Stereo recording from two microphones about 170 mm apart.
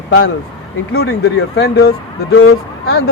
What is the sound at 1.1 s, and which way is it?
Speech, 80° left.